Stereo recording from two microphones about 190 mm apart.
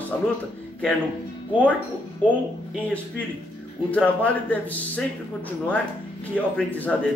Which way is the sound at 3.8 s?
5° left (ahead or behind).